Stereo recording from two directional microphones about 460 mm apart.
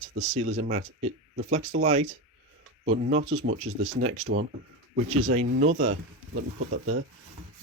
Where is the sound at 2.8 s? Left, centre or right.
Right.